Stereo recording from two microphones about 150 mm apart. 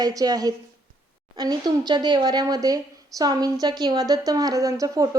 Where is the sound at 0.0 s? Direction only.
25° right (ahead or behind).